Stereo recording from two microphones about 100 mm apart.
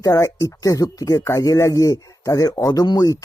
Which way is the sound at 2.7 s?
45° left (ahead or behind).